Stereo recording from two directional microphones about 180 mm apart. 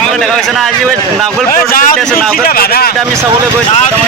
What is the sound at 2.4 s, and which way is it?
Speech, 55° left (ahead or behind).